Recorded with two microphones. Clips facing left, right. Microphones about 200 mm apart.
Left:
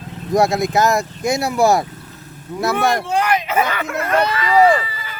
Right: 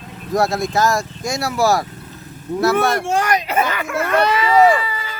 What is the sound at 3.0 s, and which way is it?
Speech, 45° right (ahead or behind).